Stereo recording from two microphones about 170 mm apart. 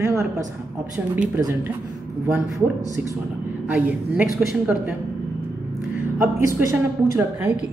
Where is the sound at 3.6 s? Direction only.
10° right (ahead or behind).